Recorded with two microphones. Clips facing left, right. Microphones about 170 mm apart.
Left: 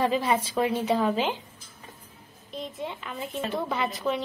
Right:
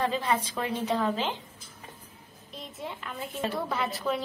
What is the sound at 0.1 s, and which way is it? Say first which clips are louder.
A woman's voice: left 4 dB; 10° left (ahead or behind).